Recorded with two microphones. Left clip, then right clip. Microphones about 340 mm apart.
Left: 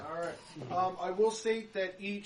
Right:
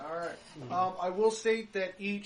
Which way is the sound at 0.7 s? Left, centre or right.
Right.